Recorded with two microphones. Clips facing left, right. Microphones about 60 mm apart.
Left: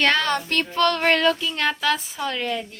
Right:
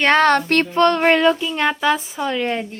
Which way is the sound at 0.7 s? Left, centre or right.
Right.